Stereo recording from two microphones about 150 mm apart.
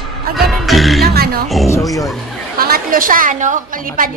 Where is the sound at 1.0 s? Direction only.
90° right.